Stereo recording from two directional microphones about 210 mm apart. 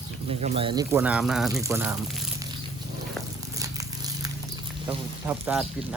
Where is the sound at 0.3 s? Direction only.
30° right (ahead or behind); by 2.3 s centre (ahead or behind).